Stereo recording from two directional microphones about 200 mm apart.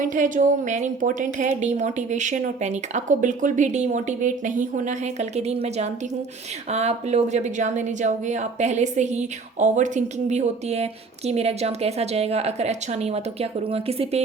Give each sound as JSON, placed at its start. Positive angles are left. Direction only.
{"t": 0.0, "sound": "a woman's voice", "side_deg": -40}